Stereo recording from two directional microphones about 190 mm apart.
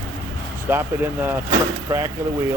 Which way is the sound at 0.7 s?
10° right (ahead or behind).